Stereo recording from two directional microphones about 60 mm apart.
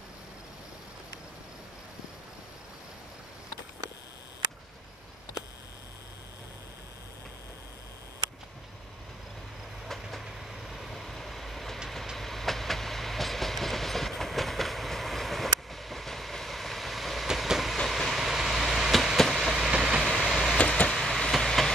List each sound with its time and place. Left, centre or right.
10.2 s train: centre
17.7 s vehicle: centre
19.1 s train: centre
19.7 s vehicle: centre
20.0 s vehicle: centre
20.5 s a sound: centre
20.9 s vehicle: centre
21.3 s train: centre